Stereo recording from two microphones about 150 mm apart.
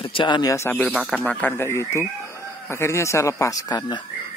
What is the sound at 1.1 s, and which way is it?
Speech, 5° left (ahead or behind).